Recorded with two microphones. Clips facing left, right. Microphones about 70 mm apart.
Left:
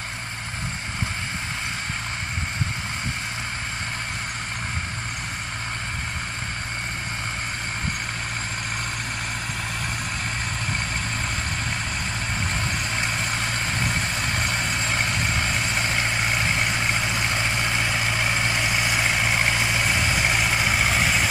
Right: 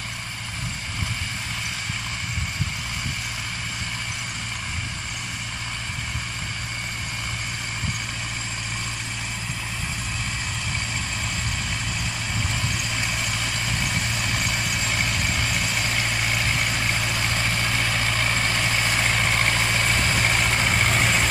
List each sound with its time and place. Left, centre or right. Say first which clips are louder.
12.9 s vehicle: left 2 dB; left; by 21.3 s centre